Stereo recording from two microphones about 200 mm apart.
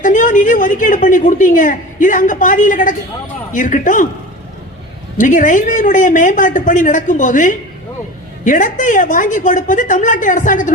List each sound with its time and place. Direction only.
0.0 s a woman's voice: 40° left (ahead or behind)
5.1 s a woman's voice: 40° left (ahead or behind)